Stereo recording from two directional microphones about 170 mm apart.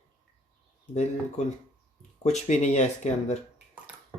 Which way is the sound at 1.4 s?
45° left (ahead or behind).